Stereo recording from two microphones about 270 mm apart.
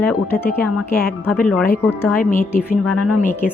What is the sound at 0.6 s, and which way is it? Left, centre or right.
Speech, left.